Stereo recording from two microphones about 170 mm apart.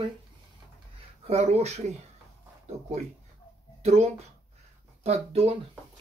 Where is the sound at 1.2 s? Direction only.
40° right (ahead or behind).